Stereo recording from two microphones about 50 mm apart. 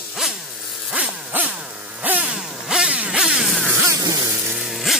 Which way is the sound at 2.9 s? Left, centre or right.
Centre.